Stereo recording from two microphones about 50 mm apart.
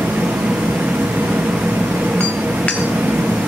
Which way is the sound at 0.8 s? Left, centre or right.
Right.